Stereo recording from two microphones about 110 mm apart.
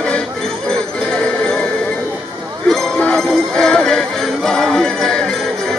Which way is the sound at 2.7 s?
5° left (ahead or behind).